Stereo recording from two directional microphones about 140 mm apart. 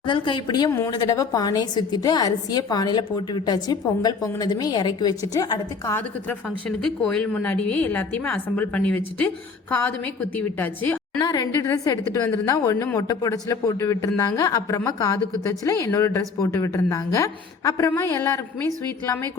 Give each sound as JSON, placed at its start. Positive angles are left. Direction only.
{"t": 0.0, "sound": "a woman's voice", "side_deg": 35}
{"t": 6.7, "sound": "a woman's voice", "side_deg": 5}
{"t": 11.2, "sound": "a woman's voice", "side_deg": 30}